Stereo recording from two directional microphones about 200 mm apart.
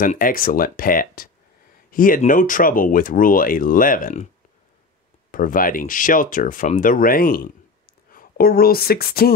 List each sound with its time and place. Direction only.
0.0 s speech: 45° left (ahead or behind)
5.3 s speech: 45° left (ahead or behind)